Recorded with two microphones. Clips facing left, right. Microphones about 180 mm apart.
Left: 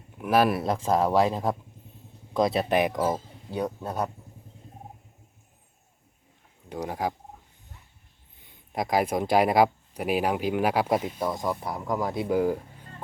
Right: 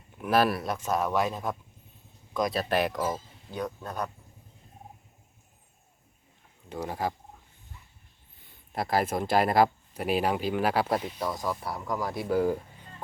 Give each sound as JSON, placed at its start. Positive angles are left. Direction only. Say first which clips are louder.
{"t": 0.2, "sound": "speech", "louder": "left 2 dB", "side_deg": 10}
{"t": 0.5, "sound": "speech", "louder": "left 5 dB", "side_deg": 30}
{"t": 3.0, "sound": "speech", "louder": "left 4 dB", "side_deg": 30}
{"t": 6.7, "sound": "speech", "louder": "left 2 dB", "side_deg": 10}
{"t": 8.4, "sound": "speech", "louder": "left 2 dB", "side_deg": 15}
{"t": 12.4, "sound": "speech", "louder": "left 1 dB", "side_deg": 10}